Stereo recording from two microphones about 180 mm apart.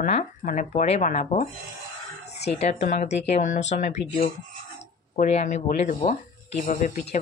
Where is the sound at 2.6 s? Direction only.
40° left (ahead or behind).